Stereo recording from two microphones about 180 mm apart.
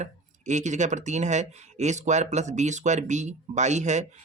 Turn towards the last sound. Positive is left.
turn(degrees=-40)  # may be behind; listen again after turning